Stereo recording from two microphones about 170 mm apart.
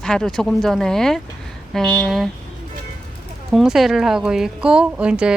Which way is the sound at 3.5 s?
Centre (ahead or behind).